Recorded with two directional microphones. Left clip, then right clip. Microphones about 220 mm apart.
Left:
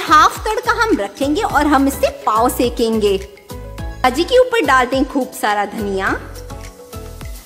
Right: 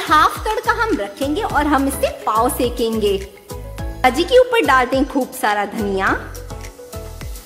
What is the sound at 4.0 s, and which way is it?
Speech, 10° left (ahead or behind).